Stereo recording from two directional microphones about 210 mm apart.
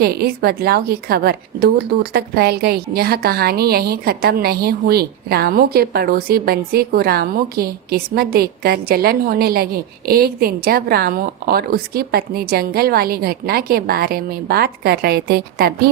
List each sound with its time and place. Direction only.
0.0 s a woman's voice: 45° right (ahead or behind)